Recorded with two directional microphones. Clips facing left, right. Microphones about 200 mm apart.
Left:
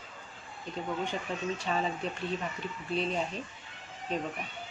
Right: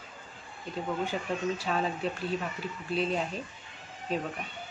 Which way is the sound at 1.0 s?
5° right (ahead or behind).